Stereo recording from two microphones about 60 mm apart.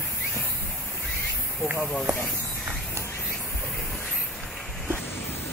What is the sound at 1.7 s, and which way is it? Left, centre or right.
Speech, centre.